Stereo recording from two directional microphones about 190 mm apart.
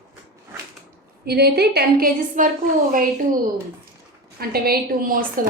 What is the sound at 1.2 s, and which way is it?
A woman's voice, 55° right (ahead or behind).